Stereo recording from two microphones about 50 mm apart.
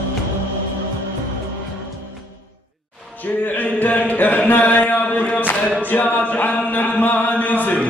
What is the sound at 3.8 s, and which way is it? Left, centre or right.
Chant, left.